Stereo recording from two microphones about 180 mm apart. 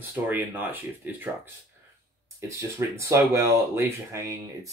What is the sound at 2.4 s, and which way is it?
Speech, 15° right (ahead or behind).